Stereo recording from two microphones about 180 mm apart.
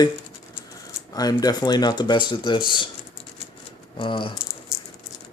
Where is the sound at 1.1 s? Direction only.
20° left (ahead or behind).